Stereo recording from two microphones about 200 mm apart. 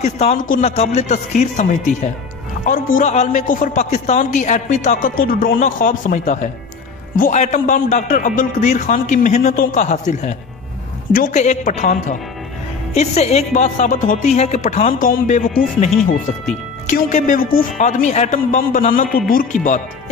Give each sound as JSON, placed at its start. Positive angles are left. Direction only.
{"t": 0.0, "sound": "a man's voice", "side_deg": 35}